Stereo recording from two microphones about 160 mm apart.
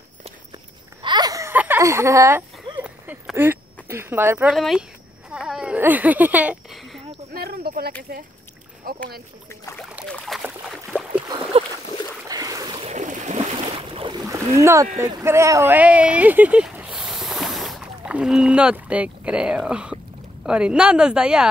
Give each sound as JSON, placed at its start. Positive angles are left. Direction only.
{"t": 1.0, "sound": "a sound", "side_deg": -25}
{"t": 3.3, "sound": "speech", "side_deg": -15}
{"t": 4.6, "sound": "a woman's voice", "side_deg": 0}
{"t": 5.3, "sound": "a sound", "side_deg": -5}
{"t": 7.3, "sound": "a sound", "side_deg": -70}
{"t": 9.5, "sound": "speech", "side_deg": 15}
{"t": 10.0, "sound": "speech", "side_deg": 5}
{"t": 10.4, "sound": "boat", "side_deg": -5}
{"t": 11.2, "sound": "boat", "side_deg": -30}
{"t": 12.3, "sound": "a sound", "side_deg": -20}
{"t": 12.8, "sound": "boat", "side_deg": -50}
{"t": 15.0, "sound": "a woman's voice", "side_deg": -20}